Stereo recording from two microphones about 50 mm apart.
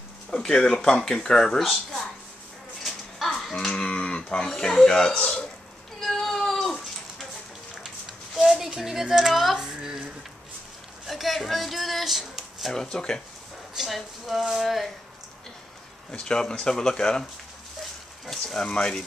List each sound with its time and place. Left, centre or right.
0.3 s speech: centre
1.6 s speech: centre
2.8 s a sound: centre
3.7 s speech: left
5.9 s cat: centre
7.8 s a sound: centre
9.6 s speech: centre
11.1 s speech: centre
12.7 s speech: centre
13.8 s speech: centre
16.1 s speech: centre
18.2 s speech: centre